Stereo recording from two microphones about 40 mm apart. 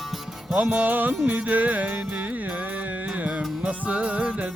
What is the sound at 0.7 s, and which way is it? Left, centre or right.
Music, right.